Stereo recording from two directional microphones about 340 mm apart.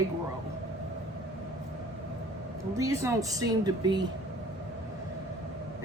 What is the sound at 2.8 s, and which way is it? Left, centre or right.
A woman's voice, centre.